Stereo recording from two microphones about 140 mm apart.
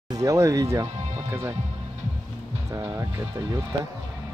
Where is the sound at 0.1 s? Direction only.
25° right (ahead or behind).